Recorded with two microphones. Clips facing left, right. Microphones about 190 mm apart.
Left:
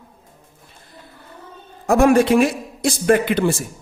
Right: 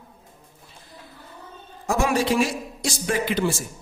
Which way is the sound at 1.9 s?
55° left (ahead or behind).